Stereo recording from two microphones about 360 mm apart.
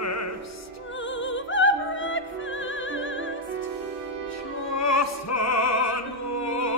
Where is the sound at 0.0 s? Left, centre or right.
Left.